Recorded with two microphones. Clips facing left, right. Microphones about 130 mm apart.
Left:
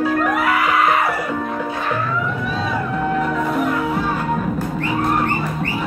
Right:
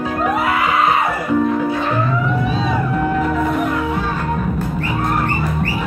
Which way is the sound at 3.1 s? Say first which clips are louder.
Right 2 dB; centre (ahead or behind).